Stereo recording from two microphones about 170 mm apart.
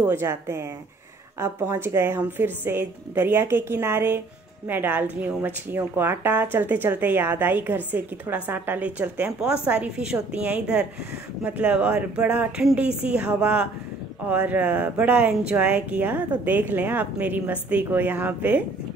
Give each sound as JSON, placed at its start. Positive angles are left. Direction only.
{"t": 0.0, "sound": "speech", "side_deg": -15}